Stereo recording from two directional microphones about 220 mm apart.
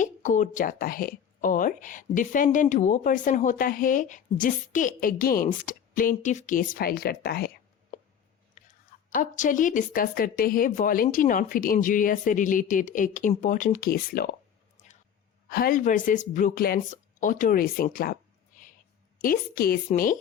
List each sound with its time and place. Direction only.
0.0 s a woman's voice: 35° left (ahead or behind)
14.8 s a sound: 35° left (ahead or behind)
15.4 s a woman's voice: 40° left (ahead or behind)